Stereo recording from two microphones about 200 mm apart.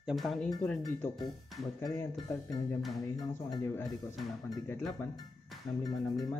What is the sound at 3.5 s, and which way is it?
Speech, 15° left (ahead or behind).